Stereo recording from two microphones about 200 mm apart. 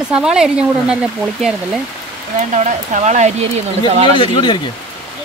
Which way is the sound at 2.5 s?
35° right (ahead or behind).